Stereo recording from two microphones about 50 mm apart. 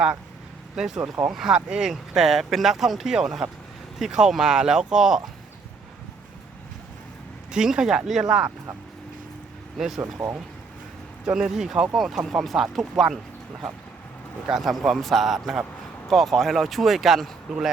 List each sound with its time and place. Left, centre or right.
0.8 s speech: centre
7.5 s speech: centre
9.7 s speech: centre
10.0 s speech: right
11.3 s speech: centre
14.4 s speech: centre